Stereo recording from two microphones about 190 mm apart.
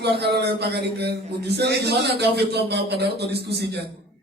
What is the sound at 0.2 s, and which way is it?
A man's voice, 60° right (ahead or behind).